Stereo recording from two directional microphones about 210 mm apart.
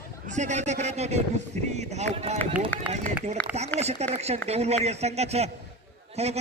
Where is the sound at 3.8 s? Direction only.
30° right (ahead or behind).